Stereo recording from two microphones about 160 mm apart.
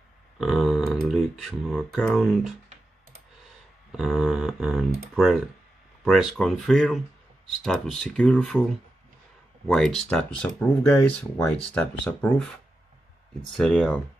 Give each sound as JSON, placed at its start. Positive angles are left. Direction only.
{"t": 0.4, "sound": "speech", "side_deg": 0}
{"t": 3.9, "sound": "speech", "side_deg": 0}
{"t": 9.7, "sound": "speech", "side_deg": 5}
{"t": 13.6, "sound": "speech", "side_deg": 5}